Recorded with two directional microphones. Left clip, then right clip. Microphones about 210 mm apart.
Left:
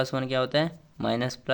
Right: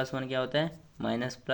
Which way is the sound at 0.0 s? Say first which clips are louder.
Left 5 dB; 30° left (ahead or behind).